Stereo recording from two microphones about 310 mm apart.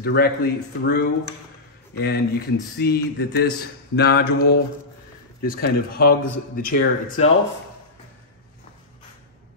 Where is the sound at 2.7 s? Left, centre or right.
Left.